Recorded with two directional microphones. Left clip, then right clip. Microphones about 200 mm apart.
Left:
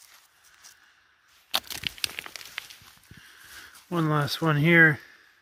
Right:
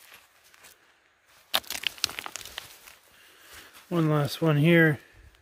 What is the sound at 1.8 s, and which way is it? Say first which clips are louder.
Crumpling: right 1 dB; 20° right (ahead or behind).